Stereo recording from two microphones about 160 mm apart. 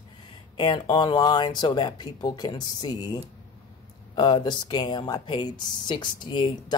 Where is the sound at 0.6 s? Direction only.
30° left (ahead or behind).